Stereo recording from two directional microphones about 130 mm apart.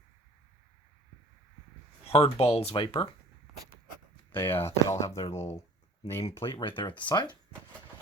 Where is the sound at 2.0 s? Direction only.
50° left (ahead or behind).